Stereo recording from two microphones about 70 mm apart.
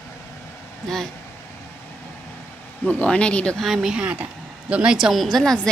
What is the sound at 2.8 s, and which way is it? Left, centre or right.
Speech, centre.